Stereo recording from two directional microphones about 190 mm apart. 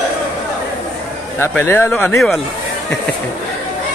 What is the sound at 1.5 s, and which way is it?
Speech, 10° left (ahead or behind).